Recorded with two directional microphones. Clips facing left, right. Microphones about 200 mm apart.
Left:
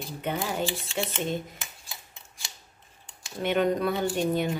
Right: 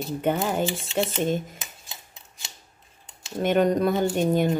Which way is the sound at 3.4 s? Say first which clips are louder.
Right 4 dB; 45° right (ahead or behind).